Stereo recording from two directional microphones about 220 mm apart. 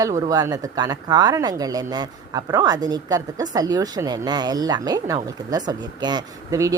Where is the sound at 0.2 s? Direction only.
15° right (ahead or behind).